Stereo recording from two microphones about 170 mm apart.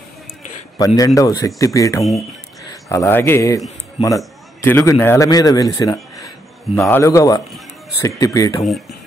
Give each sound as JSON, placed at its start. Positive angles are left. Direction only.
{"t": 0.7, "sound": "speech", "side_deg": 20}
{"t": 4.6, "sound": "speech", "side_deg": 10}
{"t": 6.7, "sound": "speech", "side_deg": 0}
{"t": 7.0, "sound": "speech", "side_deg": 20}